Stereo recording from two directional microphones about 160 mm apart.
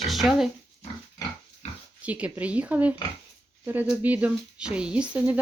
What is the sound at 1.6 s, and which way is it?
Oink, 40° left (ahead or behind).